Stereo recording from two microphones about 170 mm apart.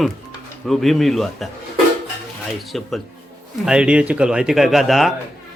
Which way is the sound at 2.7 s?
Centre (ahead or behind).